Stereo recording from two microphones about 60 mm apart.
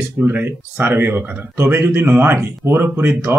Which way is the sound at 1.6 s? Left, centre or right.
Right.